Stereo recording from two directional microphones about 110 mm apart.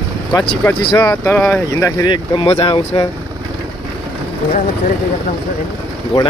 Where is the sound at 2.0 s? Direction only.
50° left (ahead or behind).